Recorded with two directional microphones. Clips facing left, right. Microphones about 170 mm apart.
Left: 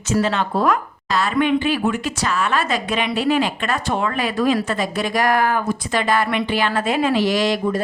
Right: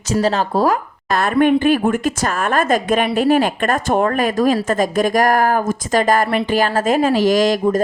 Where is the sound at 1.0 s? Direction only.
50° right (ahead or behind).